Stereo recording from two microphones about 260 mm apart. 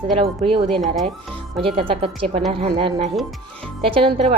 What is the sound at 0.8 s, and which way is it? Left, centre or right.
Speech, centre.